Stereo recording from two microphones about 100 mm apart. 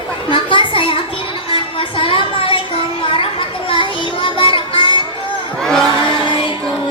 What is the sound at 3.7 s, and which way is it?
Child singing, 60° left (ahead or behind).